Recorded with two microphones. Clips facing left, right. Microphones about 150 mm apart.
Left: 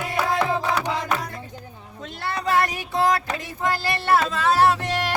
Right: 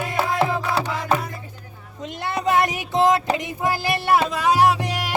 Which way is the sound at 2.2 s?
20° right (ahead or behind).